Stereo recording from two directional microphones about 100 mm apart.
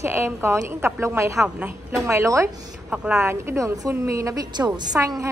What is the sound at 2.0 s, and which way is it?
Speech, 30° right (ahead or behind).